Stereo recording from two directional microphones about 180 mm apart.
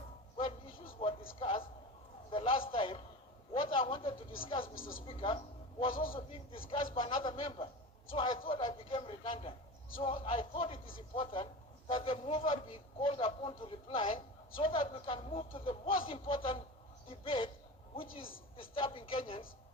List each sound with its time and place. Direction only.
1.0 s music: 35° left (ahead or behind)
1.4 s a sound: 30° left (ahead or behind)
2.3 s a man's voice: 30° left (ahead or behind)
3.5 s a sound: 30° left (ahead or behind)
4.4 s a man's voice: 30° left (ahead or behind)
4.7 s speech: 50° left (ahead or behind)
5.0 s a man's voice: 30° left (ahead or behind)
5.9 s speech: 50° left (ahead or behind)
6.9 s a man's voice: 30° left (ahead or behind)